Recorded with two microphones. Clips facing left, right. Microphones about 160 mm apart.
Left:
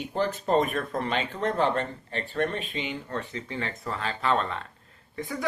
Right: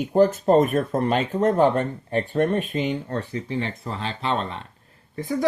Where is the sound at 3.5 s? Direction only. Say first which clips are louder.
Right 5 dB; 30° right (ahead or behind).